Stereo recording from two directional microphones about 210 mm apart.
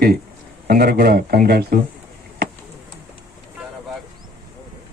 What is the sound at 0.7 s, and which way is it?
Speech, 45° right (ahead or behind).